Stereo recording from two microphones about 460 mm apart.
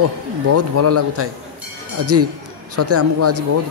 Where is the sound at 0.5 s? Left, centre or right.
Right.